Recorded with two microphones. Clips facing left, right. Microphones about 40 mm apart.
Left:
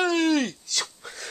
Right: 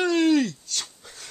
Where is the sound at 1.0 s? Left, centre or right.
Left.